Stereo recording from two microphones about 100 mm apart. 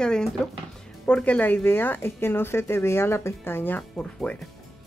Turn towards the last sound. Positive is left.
turn(degrees=10)  # may be behind; listen again after turning